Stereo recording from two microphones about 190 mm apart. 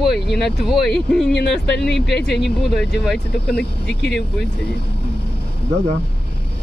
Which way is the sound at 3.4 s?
60° left (ahead or behind).